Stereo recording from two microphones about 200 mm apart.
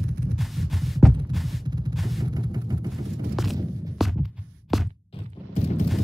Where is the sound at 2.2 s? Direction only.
20° right (ahead or behind).